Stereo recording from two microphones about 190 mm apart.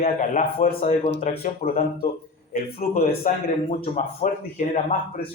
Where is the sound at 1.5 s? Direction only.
50° left (ahead or behind).